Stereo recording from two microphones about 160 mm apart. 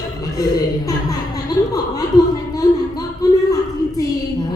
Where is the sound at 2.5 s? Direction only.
20° left (ahead or behind).